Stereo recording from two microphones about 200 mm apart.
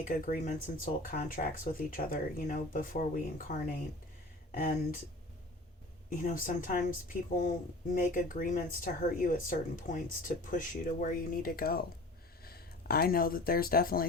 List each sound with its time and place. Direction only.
0.1 s speech: 45° left (ahead or behind)
6.1 s speech: 40° left (ahead or behind)